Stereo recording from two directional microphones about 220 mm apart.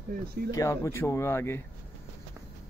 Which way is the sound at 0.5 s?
15° left (ahead or behind).